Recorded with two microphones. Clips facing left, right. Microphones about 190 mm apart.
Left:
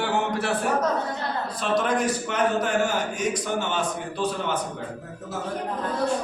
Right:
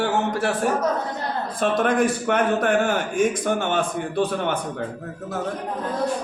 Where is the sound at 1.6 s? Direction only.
50° right (ahead or behind).